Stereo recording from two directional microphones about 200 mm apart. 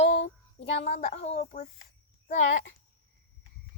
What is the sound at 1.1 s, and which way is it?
A child's voice, 30° left (ahead or behind).